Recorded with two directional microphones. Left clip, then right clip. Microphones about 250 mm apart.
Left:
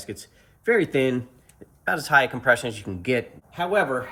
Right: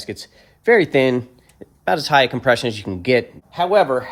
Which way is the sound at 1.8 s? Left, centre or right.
Right.